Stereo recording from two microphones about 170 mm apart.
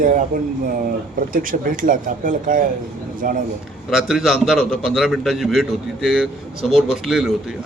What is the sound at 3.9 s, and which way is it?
A man's voice, centre (ahead or behind).